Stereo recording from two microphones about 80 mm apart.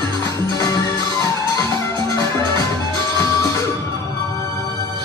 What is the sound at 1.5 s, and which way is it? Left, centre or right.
Music, left.